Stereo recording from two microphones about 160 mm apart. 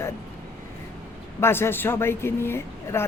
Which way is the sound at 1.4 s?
15° left (ahead or behind).